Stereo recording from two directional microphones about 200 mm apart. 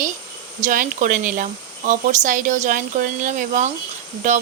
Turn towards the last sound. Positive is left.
turn(degrees=-35)  # may be behind; listen again after turning